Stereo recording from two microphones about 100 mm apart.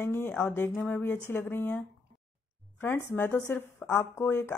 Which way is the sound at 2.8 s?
25° left (ahead or behind).